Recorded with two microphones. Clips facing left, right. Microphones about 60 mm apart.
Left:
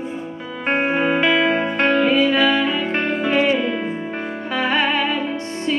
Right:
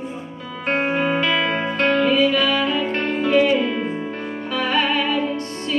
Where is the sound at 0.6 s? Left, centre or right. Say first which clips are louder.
Left 2 dB; left.